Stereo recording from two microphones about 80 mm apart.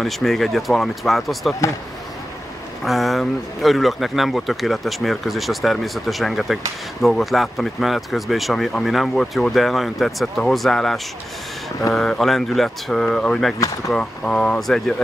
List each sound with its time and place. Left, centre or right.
0.0 s speech: centre
2.8 s speech: centre